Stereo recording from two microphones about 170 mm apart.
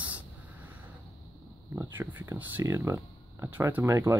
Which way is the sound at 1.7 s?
15° right (ahead or behind).